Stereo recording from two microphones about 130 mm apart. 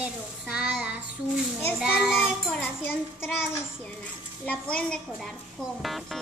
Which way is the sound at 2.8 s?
15° left (ahead or behind).